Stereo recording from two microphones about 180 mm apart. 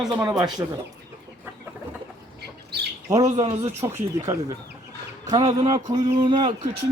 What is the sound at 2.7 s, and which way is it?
Bird, 65° right (ahead or behind).